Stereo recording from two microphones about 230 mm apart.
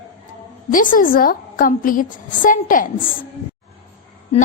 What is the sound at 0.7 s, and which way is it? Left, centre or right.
A woman's voice, left.